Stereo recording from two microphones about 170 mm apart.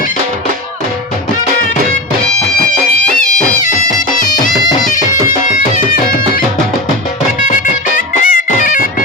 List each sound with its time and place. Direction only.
7.4 s music: 50° left (ahead or behind)